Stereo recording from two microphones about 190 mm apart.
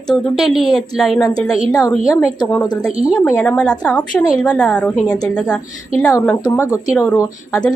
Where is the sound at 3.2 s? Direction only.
5° left (ahead or behind).